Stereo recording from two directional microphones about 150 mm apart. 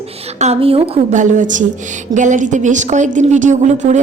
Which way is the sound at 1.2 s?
55° right (ahead or behind).